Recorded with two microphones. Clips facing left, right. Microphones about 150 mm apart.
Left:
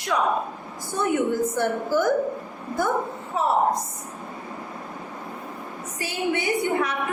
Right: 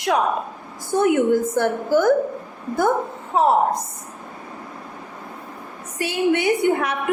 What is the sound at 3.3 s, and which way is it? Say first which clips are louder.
Speech: right 7 dB; 80° right.